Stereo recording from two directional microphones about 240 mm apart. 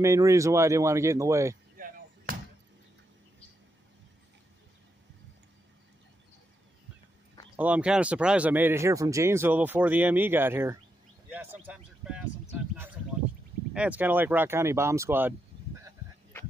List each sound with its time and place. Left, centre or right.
0.0 s speech: centre
1.8 s basketball bounce: right
7.5 s speech: centre
13.7 s speech: centre